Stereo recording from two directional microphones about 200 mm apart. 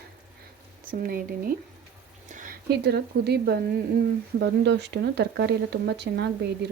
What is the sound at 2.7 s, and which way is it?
Speech, 55° right (ahead or behind).